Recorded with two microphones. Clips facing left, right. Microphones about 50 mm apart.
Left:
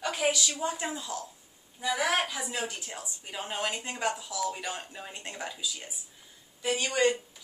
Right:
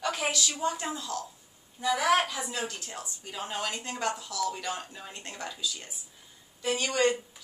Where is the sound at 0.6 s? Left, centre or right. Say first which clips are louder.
Right 1 dB; centre.